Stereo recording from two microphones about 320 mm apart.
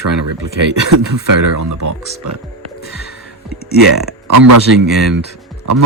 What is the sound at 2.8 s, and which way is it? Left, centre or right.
Music, left.